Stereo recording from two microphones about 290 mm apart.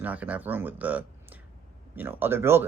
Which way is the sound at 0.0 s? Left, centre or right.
Centre.